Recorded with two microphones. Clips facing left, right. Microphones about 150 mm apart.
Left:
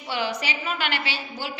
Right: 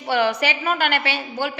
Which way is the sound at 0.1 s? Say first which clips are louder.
Right 8 dB; 60° right (ahead or behind).